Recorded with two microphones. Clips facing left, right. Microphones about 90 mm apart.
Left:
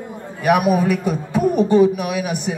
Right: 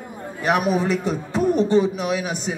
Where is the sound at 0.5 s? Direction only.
10° left (ahead or behind).